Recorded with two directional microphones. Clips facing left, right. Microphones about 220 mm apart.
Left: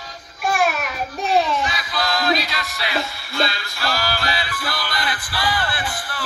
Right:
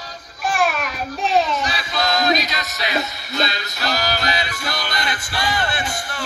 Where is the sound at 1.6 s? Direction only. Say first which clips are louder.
Right 1 dB; 30° right (ahead or behind).